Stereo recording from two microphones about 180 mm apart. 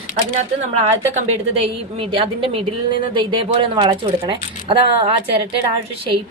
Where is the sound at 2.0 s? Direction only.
30° right (ahead or behind).